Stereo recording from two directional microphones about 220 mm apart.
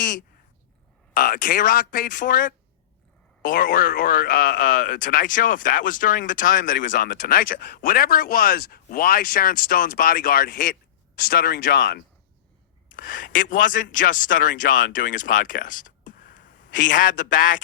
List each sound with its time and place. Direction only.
0.0 s a sound: 35° left (ahead or behind)
1.1 s speech: 40° left (ahead or behind)
12.9 s speech: 35° left (ahead or behind)